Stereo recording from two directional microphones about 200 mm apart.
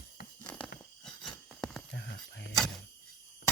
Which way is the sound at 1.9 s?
60° left (ahead or behind).